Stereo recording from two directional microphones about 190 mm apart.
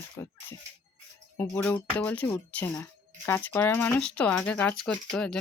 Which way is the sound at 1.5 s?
10° left (ahead or behind).